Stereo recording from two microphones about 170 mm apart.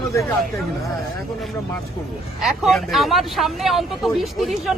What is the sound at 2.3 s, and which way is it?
Speech, centre (ahead or behind).